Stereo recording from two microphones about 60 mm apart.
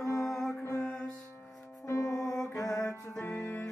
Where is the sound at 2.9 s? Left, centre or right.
Left.